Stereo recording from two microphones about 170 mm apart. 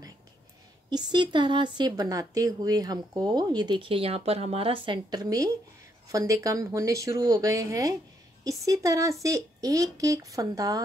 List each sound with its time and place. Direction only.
0.8 s speech: 25° right (ahead or behind)